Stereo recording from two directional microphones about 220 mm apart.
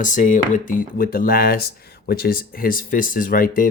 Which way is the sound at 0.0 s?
35° left (ahead or behind).